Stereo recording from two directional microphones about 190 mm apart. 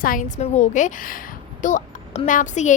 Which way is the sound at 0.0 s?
45° left (ahead or behind).